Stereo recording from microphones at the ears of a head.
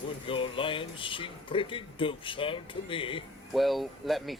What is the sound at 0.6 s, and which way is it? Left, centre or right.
Speech, left.